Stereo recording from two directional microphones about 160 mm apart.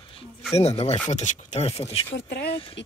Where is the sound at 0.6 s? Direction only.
40° left (ahead or behind).